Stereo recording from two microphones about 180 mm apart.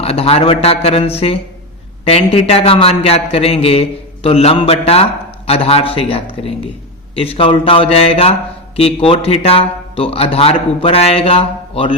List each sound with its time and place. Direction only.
0.0 s a man's voice: 35° left (ahead or behind)